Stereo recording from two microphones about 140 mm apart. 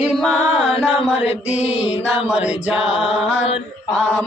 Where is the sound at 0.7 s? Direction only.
45° left (ahead or behind).